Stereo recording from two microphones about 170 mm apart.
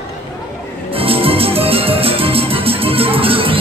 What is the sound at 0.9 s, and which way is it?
Music, 35° right (ahead or behind).